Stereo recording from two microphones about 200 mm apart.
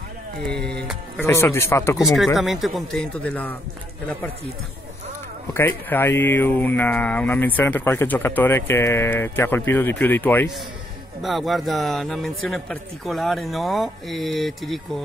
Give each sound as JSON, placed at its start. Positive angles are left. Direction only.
{"t": 0.6, "sound": "music", "side_deg": -55}
{"t": 1.2, "sound": "speech", "side_deg": 10}
{"t": 2.0, "sound": "speech", "side_deg": 0}
{"t": 5.5, "sound": "speech", "side_deg": 10}
{"t": 11.2, "sound": "speech", "side_deg": 0}